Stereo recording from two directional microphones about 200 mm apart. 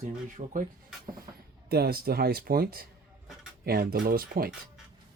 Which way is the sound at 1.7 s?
50° right (ahead or behind).